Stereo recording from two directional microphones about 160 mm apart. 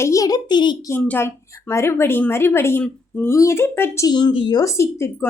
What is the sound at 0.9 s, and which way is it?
Speech, 10° left (ahead or behind).